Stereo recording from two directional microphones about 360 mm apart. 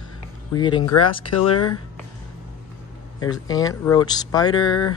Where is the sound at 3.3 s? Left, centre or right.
Centre.